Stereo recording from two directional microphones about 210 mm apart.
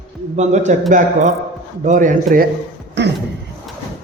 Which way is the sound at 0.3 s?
35° right (ahead or behind).